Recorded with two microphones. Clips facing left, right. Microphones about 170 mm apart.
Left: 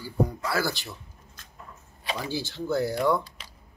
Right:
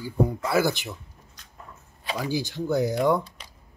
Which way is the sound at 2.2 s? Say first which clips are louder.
Right 5 dB; 15° right (ahead or behind).